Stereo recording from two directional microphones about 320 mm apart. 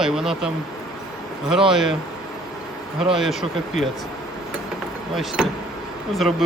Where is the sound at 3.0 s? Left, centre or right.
Centre.